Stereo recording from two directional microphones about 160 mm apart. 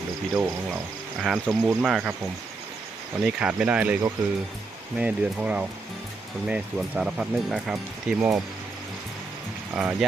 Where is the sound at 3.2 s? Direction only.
5° right (ahead or behind).